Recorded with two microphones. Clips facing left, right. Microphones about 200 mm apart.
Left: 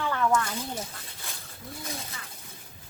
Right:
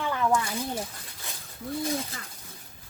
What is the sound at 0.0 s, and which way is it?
Snake, 10° right (ahead or behind).